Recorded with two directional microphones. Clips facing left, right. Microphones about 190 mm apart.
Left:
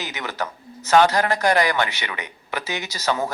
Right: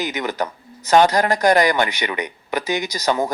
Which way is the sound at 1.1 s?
40° right (ahead or behind).